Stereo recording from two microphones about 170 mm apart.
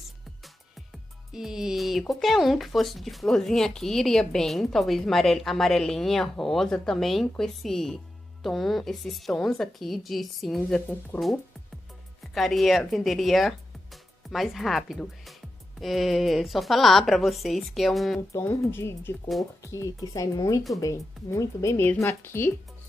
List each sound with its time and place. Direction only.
1.3 s speech: 5° right (ahead or behind)
12.2 s speech: centre (ahead or behind)
18.3 s speech: 15° left (ahead or behind)